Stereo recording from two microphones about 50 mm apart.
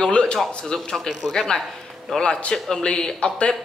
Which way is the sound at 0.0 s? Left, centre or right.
Centre.